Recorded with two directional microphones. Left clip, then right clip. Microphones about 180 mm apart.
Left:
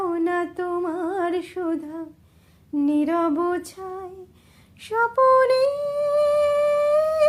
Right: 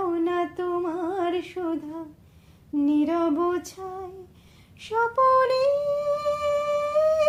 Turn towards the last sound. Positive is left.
turn(degrees=25)  # may be behind; listen again after turning